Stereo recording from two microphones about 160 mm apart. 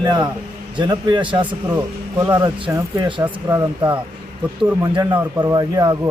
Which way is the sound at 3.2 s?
10° right (ahead or behind).